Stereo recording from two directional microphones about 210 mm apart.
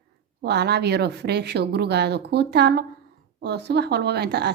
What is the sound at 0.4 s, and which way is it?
A woman's voice, 50° right (ahead or behind).